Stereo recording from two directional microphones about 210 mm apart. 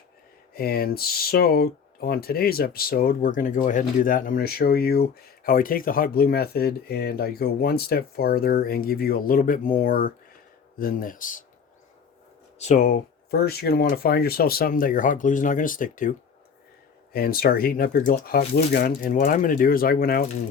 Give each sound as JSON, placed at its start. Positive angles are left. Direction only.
{"t": 0.5, "sound": "speech", "side_deg": 45}
{"t": 12.5, "sound": "speech", "side_deg": 35}